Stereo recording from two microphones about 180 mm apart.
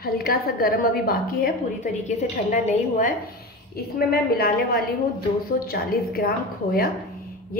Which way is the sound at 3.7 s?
60° left (ahead or behind).